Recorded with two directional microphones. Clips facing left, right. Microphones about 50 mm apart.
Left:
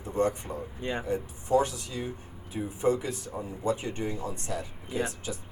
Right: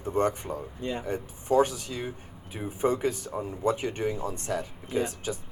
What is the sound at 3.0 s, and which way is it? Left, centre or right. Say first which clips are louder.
Speech: right 5 dB; right.